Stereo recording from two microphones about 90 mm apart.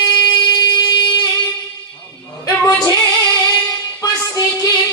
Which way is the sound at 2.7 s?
35° left (ahead or behind).